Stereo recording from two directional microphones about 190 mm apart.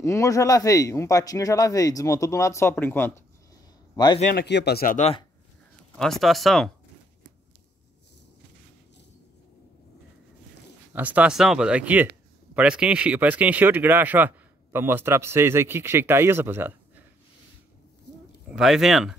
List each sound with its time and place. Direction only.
0.0 s speech: 15° left (ahead or behind)
3.9 s a man's voice: 20° left (ahead or behind)
4.3 s speech: 60° left (ahead or behind)
4.9 s speech: 35° left (ahead or behind)
5.9 s speech: centre (ahead or behind)
10.9 s speech: 10° right (ahead or behind)
18.5 s speech: centre (ahead or behind)